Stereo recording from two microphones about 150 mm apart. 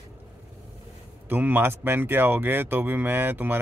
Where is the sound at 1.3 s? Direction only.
15° right (ahead or behind).